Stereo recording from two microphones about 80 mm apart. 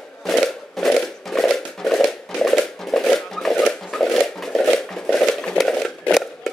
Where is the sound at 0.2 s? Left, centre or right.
Centre.